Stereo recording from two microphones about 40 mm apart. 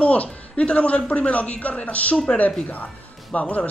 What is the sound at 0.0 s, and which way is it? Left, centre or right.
Speech, left.